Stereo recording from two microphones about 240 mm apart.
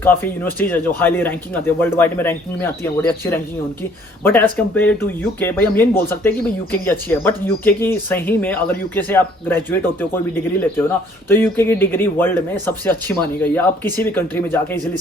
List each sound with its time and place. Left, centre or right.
0.0 s speech: centre
11.3 s speech: centre